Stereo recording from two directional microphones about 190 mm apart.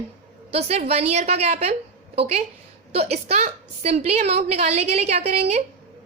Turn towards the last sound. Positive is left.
turn(degrees=-35)  # may be behind; listen again after turning